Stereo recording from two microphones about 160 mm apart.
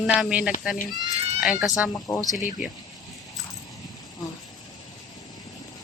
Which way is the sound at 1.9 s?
20° left (ahead or behind).